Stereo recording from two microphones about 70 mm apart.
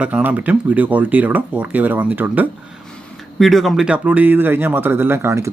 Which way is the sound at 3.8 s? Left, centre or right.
Centre.